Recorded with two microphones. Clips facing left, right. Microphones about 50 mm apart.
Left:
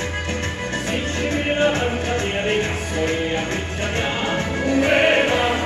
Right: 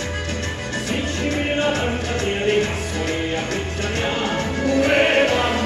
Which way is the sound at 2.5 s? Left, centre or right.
Left.